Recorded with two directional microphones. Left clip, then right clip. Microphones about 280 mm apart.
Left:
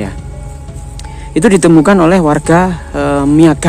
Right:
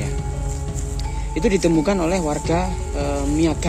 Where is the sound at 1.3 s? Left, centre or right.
Left.